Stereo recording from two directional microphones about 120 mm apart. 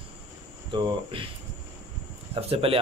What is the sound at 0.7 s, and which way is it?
Speech, 40° right (ahead or behind).